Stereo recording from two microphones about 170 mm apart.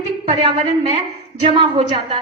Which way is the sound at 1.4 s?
30° right (ahead or behind).